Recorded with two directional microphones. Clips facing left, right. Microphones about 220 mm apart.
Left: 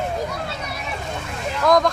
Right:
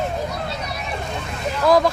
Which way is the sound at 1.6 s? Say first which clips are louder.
Right 1 dB; 5° right (ahead or behind).